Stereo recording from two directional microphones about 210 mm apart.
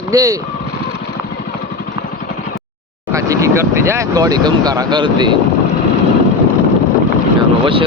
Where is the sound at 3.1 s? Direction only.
15° right (ahead or behind).